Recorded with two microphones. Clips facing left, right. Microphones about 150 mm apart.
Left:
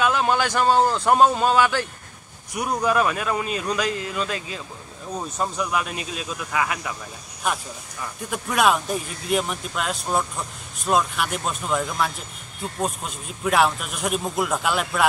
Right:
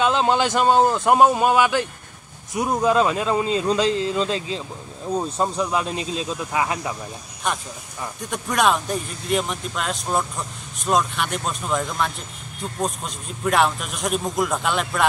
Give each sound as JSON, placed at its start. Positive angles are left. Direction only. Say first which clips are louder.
{"t": 0.0, "sound": "speech", "louder": "right 2 dB", "side_deg": -25}
{"t": 7.5, "sound": "a man's voice", "louder": "even", "side_deg": 5}